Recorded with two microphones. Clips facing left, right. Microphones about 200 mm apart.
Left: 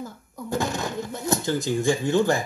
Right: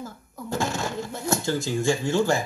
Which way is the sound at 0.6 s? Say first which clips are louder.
Left 1 dB; 15° left (ahead or behind).